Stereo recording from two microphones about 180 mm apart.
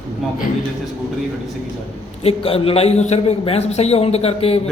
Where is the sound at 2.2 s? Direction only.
30° left (ahead or behind).